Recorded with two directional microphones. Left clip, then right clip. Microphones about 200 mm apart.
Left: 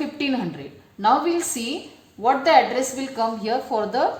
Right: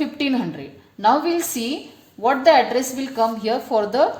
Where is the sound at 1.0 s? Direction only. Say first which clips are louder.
Right 1 dB; 35° right (ahead or behind).